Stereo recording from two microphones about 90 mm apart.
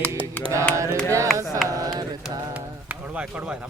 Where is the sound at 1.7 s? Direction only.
45° right (ahead or behind).